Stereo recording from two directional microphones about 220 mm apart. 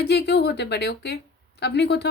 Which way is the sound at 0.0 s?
50° left (ahead or behind).